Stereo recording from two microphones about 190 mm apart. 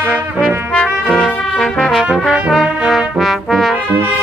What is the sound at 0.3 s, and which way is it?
Brass instrument, 10° right (ahead or behind).